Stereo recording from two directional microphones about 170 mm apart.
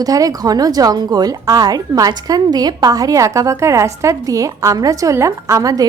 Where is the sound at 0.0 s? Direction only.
20° right (ahead or behind).